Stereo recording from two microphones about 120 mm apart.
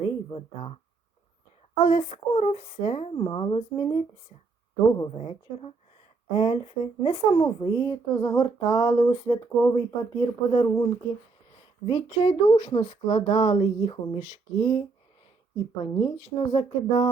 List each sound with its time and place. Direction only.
0.0 s speech: 45° left (ahead or behind)
1.8 s speech: 45° left (ahead or behind)
2.0 s speech: 60° left (ahead or behind); by 7.9 s 35° left (ahead or behind)
8.1 s a sound: 25° left (ahead or behind)
8.7 s speech: 40° left (ahead or behind)
15.9 s speech: 40° left (ahead or behind)